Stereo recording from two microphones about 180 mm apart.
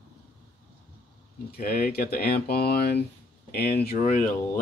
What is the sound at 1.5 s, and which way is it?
Speech, 60° left (ahead or behind).